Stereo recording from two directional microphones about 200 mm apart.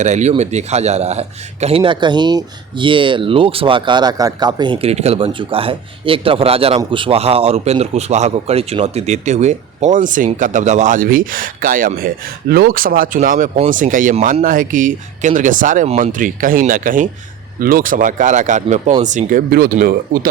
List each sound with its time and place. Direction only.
0.0 s speech: 35° right (ahead or behind)